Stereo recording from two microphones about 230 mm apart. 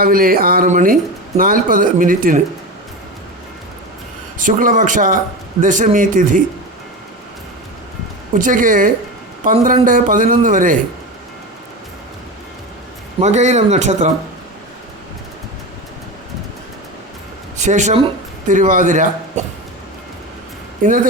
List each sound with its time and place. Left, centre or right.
0.0 s speech: right
4.4 s speech: right
8.4 s speech: right
13.1 s speech: right
17.6 s speech: right
20.8 s speech: right